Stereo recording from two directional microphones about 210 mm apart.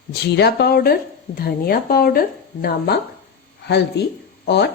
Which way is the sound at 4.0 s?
50° left (ahead or behind).